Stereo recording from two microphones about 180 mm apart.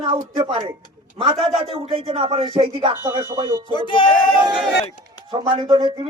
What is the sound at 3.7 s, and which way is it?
Speech, 25° left (ahead or behind).